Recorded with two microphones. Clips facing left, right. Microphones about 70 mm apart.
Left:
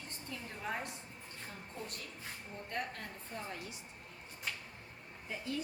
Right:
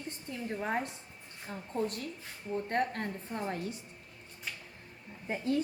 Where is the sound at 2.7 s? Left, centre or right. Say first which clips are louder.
Right 8 dB; right.